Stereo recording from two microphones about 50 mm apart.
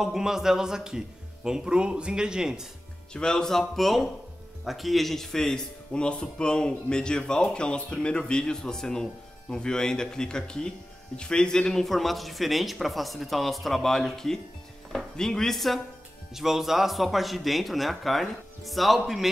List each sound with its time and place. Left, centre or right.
0.0 s a man's voice: centre
3.1 s a man's voice: centre
11.8 s a man's voice: centre
16.3 s a man's voice: centre